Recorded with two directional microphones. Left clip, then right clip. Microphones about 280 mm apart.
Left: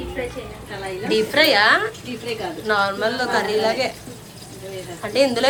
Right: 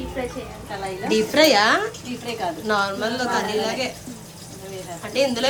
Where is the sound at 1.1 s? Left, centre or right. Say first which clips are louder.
Even; right.